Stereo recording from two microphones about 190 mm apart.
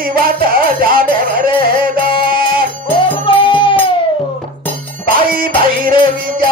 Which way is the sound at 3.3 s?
25° left (ahead or behind).